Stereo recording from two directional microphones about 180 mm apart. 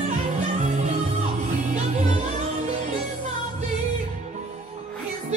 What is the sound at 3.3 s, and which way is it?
Music, 40° right (ahead or behind).